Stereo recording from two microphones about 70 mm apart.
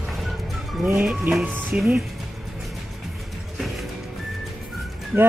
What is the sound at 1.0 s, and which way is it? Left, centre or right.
Speech, centre.